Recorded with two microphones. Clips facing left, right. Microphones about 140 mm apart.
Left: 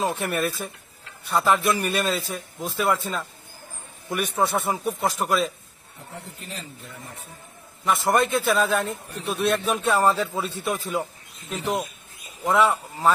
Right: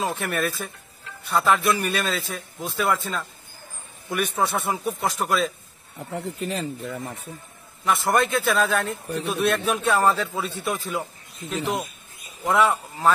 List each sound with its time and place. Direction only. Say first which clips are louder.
0.0 s a man's voice: left 1 dB; centre (ahead or behind)
1.6 s speech: even; 40° left (ahead or behind)
2.0 s a man's voice: left 2 dB; centre (ahead or behind)
4.1 s a man's voice: even; centre (ahead or behind)
6.1 s speech: right 10 dB; 65° right (ahead or behind)
7.8 s a man's voice: even; centre (ahead or behind)
12.4 s a man's voice: even; centre (ahead or behind)